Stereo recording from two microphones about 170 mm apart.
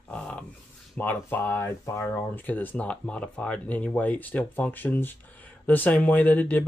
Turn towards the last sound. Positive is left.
turn(degrees=10)  # may be behind; listen again after turning